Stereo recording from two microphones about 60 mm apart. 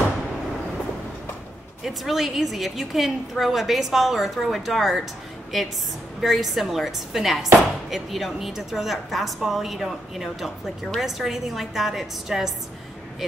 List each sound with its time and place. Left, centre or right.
1.9 s a woman's voice: centre
6.2 s a woman's voice: centre